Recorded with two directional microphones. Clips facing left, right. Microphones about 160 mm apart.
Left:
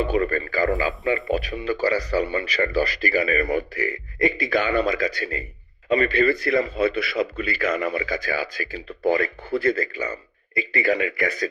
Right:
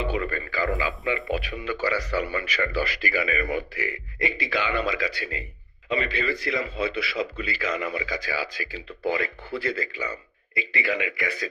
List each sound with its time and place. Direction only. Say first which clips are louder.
0.0 s a man's voice: left 6 dB; 45° left (ahead or behind)